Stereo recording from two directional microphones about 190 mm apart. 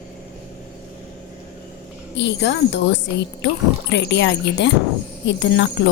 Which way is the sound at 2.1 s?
65° left (ahead or behind).